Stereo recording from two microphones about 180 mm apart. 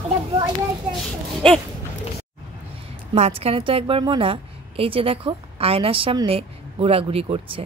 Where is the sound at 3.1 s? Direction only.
35° right (ahead or behind).